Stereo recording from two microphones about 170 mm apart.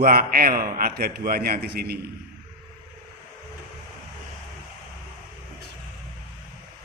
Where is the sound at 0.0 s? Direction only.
60° right (ahead or behind).